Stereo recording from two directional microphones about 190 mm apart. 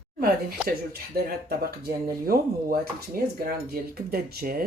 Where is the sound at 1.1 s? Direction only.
55° right (ahead or behind).